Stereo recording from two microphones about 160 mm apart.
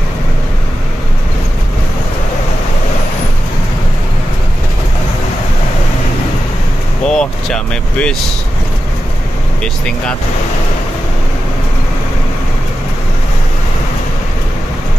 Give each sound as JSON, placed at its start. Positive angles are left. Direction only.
{"t": 7.1, "sound": "speech", "side_deg": 5}
{"t": 9.6, "sound": "speech", "side_deg": 5}